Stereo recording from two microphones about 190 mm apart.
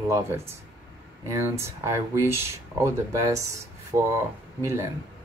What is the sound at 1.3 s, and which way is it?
Speech, 15° right (ahead or behind).